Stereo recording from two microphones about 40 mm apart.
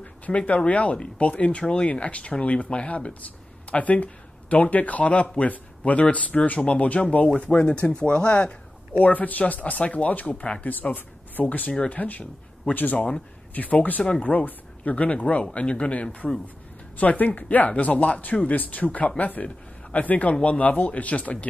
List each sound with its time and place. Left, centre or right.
0.3 s speech: centre
0.7 s speech: left
9.0 s speech: left
10.7 s a man's voice: left